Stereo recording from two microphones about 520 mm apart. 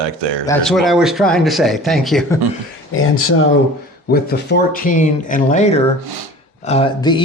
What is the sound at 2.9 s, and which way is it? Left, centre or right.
Speech, left.